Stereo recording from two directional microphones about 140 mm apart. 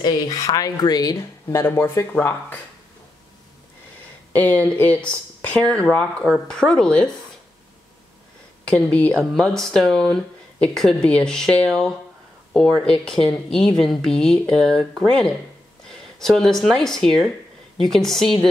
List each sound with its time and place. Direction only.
0.0 s speech: 30° left (ahead or behind)
4.3 s speech: 10° left (ahead or behind)
8.6 s speech: 10° left (ahead or behind)